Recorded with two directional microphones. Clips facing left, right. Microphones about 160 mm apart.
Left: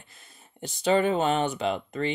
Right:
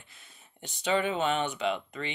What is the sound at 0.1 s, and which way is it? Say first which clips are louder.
Speech: left 3 dB; 40° left (ahead or behind).